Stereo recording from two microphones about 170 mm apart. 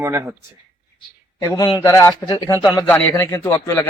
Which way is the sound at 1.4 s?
25° left (ahead or behind).